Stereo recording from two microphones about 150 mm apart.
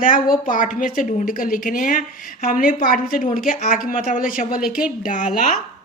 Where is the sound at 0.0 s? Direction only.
65° left (ahead or behind).